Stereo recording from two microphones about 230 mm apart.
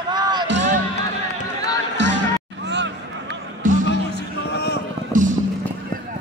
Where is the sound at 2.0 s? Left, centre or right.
Right.